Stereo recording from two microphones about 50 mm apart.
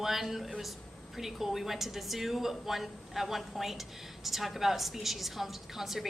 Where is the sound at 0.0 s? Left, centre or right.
Centre.